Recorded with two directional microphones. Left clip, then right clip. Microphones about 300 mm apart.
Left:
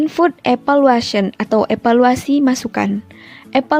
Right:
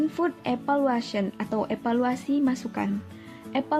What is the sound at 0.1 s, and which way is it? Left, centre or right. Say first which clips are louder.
A woman's voice: left 13 dB; left.